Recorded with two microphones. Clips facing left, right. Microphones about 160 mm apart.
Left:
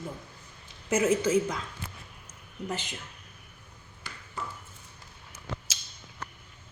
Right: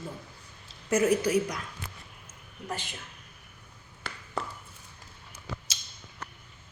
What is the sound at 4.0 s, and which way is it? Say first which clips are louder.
Ping: right 6 dB; 70° right (ahead or behind).